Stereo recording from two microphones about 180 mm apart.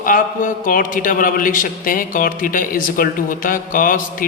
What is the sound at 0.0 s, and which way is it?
A man's voice, 50° left (ahead or behind).